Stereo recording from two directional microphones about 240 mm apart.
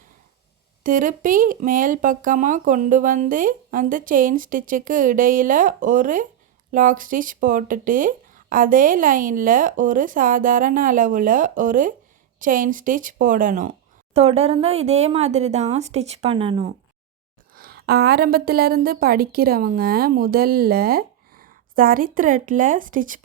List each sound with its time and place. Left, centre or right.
0.9 s a woman's voice: right
17.5 s a woman's voice: right